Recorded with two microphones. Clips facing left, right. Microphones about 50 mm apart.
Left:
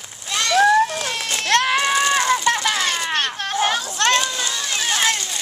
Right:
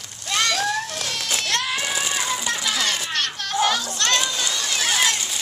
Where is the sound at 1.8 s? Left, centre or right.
Left.